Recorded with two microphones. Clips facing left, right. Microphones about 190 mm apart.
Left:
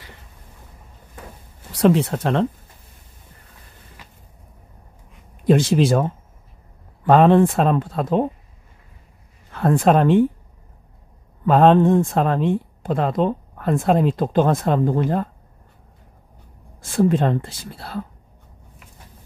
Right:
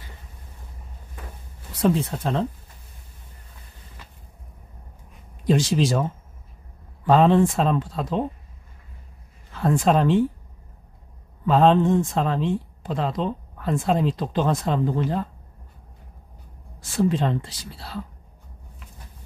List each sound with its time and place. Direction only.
1.7 s speech: 75° left (ahead or behind)
5.4 s speech: 55° left (ahead or behind)
9.5 s speech: 55° left (ahead or behind)
11.4 s speech: 55° left (ahead or behind)
16.8 s speech: 50° left (ahead or behind)